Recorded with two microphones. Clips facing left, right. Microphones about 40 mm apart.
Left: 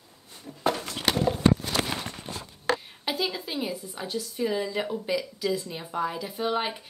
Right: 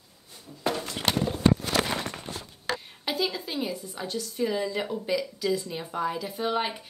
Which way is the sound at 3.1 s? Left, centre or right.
Centre.